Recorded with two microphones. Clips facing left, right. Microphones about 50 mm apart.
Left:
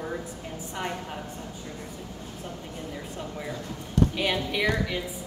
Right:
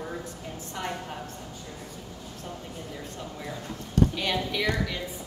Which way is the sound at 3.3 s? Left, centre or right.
Centre.